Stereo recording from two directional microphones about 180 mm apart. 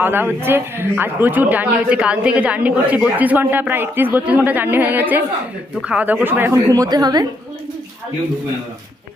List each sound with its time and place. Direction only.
0.0 s a man's voice: 10° right (ahead or behind)